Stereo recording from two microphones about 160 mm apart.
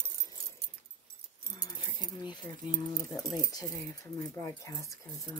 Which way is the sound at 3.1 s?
25° left (ahead or behind).